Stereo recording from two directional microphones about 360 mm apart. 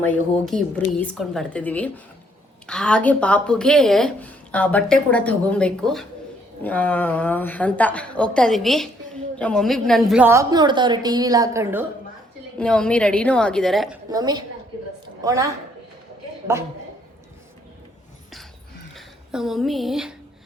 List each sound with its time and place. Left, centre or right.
0.0 s a woman's voice: centre
18.9 s speech: centre